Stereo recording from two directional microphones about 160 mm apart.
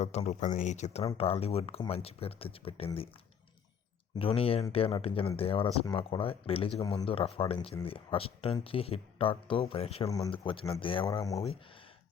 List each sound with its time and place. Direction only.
0.0 s speech: 45° left (ahead or behind)
4.2 s speech: 35° left (ahead or behind)
10.1 s speech: 25° left (ahead or behind)
11.0 s speech: 20° left (ahead or behind)